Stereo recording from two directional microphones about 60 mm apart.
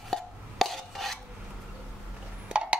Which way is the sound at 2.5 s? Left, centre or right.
Centre.